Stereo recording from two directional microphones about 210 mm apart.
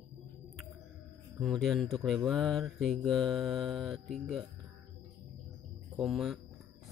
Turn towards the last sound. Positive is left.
turn(degrees=0)  # may be behind; listen again after turning